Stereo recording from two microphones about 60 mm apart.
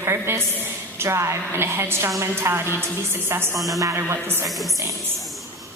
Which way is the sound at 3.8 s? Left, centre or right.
Right.